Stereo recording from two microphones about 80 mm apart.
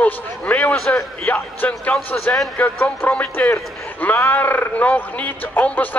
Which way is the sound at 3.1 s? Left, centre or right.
Centre.